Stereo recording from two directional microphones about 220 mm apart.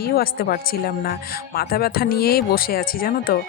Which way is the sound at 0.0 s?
45° left (ahead or behind).